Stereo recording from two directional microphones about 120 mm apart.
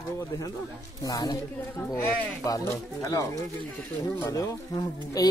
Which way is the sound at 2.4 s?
25° left (ahead or behind).